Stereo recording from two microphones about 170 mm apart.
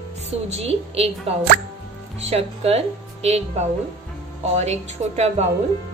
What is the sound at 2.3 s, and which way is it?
A woman's voice, 35° right (ahead or behind).